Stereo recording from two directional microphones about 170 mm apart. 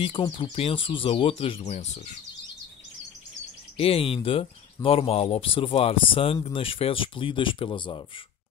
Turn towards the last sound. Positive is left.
turn(degrees=30)  # may be behind; listen again after turning